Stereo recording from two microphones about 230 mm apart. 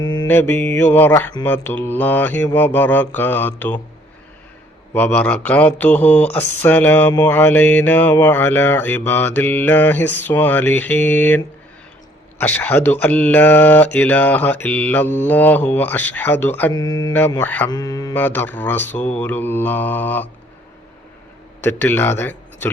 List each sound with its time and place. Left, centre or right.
0.0 s mantra: centre
4.9 s mantra: centre
21.6 s speech: centre